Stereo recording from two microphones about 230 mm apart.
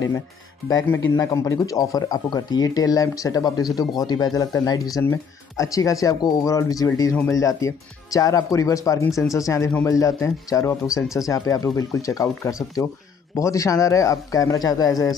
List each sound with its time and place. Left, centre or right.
0.7 s speech: centre